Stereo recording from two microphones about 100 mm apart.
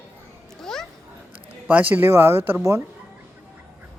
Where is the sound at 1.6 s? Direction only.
15° right (ahead or behind).